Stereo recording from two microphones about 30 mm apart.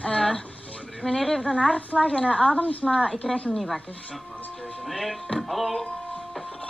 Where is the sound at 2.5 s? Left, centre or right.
Left.